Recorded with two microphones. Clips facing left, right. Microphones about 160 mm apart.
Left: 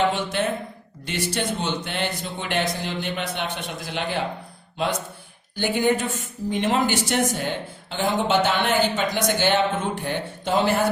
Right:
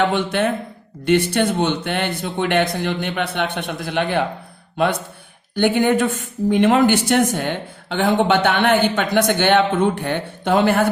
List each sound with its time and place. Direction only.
0.1 s speech: 60° right (ahead or behind)